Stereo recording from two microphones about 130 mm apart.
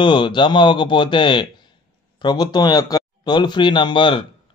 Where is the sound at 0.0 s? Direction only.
40° left (ahead or behind).